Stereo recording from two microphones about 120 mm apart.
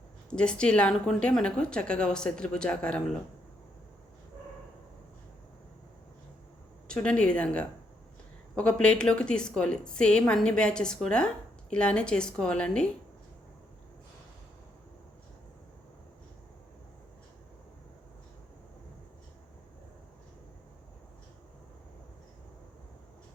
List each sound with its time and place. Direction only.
0.3 s a woman's voice: 10° left (ahead or behind)
6.8 s a woman's voice: 10° left (ahead or behind)